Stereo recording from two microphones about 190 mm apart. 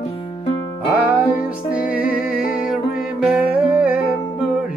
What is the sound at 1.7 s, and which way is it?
Music, 5° right (ahead or behind).